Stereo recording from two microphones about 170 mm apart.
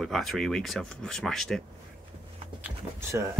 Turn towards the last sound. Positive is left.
turn(degrees=-15)  # may be behind; listen again after turning